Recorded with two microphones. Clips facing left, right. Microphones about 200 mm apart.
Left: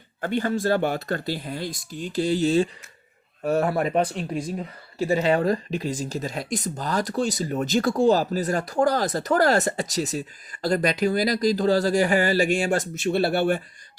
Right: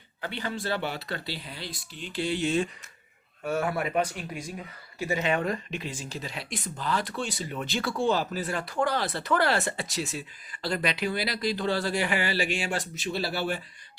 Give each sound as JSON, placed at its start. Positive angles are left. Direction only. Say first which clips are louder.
{"t": 0.2, "sound": "speech", "louder": "left 9 dB", "side_deg": 45}